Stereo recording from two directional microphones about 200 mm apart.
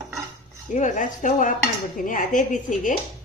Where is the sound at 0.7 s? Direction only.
35° left (ahead or behind).